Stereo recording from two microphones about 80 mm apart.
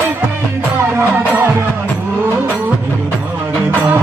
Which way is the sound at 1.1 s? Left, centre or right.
Right.